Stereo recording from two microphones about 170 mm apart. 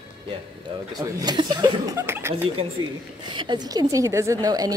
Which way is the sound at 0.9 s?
20° right (ahead or behind).